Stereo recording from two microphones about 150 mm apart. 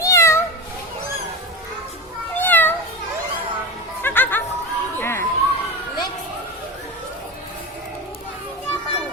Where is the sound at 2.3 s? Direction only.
10° left (ahead or behind).